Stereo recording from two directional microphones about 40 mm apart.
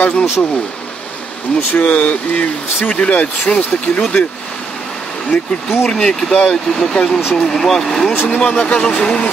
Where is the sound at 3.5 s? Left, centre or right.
Left.